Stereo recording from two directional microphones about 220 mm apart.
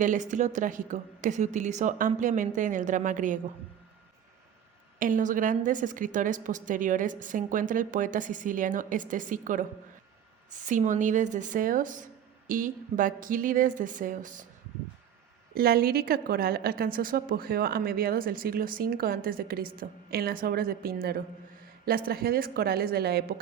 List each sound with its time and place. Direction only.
0.0 s a woman's voice: 35° right (ahead or behind)
4.9 s a woman's voice: 35° right (ahead or behind)
15.5 s a woman's voice: 45° right (ahead or behind)